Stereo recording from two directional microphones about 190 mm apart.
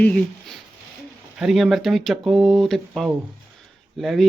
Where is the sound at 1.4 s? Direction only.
Centre (ahead or behind).